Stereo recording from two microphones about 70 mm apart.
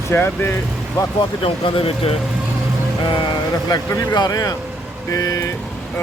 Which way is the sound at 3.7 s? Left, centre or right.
Left.